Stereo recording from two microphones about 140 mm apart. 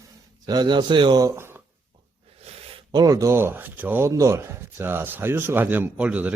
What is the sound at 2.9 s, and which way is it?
Speech, 25° right (ahead or behind).